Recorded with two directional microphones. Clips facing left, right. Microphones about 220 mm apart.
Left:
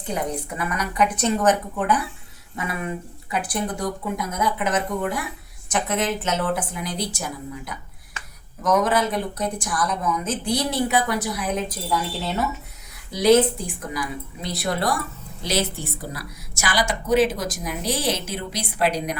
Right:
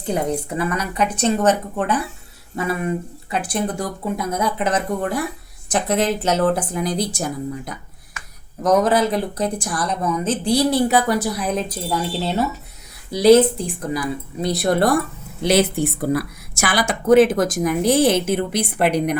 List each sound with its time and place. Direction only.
0.1 s a woman's voice: 30° right (ahead or behind); by 19.2 s 60° right (ahead or behind)